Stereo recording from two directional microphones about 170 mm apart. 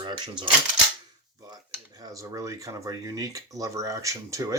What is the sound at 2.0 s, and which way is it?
Speech, 20° right (ahead or behind).